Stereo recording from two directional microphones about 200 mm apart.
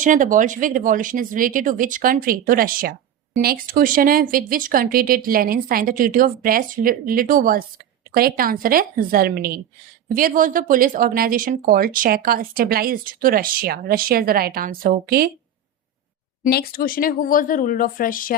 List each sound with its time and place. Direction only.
0.0 s speech: 40° right (ahead or behind)
16.4 s speech: 50° left (ahead or behind)